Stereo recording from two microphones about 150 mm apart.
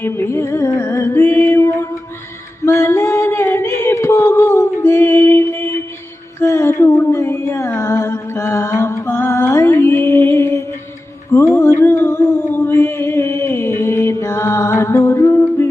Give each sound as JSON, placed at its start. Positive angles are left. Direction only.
{"t": 0.0, "sound": "music", "side_deg": 15}
{"t": 2.6, "sound": "singing", "side_deg": 20}
{"t": 6.4, "sound": "a sound", "side_deg": 20}